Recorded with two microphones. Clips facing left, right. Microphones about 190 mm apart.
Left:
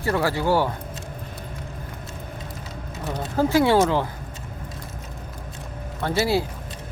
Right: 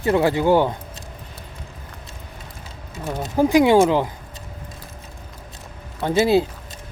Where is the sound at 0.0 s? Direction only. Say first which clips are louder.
Right 5 dB; 20° right (ahead or behind).